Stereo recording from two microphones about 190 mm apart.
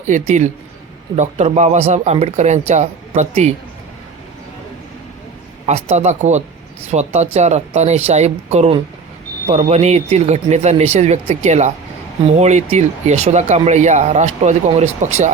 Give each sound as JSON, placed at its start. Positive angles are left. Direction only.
{"t": 0.0, "sound": "speech", "side_deg": -40}
{"t": 5.6, "sound": "speech", "side_deg": -35}